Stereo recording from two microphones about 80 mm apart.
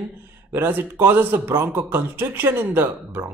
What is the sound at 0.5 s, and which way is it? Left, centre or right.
Speech, right.